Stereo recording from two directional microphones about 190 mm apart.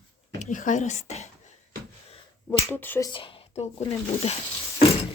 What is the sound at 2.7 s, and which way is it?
A woman's voice, 10° left (ahead or behind).